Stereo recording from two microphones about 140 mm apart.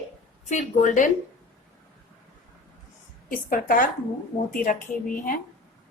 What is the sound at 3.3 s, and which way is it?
A woman's voice, 80° left.